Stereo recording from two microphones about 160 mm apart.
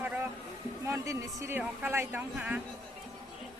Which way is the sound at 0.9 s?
20° right (ahead or behind).